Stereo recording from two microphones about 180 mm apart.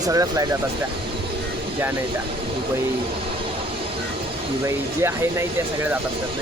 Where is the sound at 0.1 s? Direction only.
20° right (ahead or behind).